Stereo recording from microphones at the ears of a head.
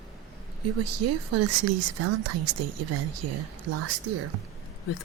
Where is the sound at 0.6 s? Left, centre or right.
Right.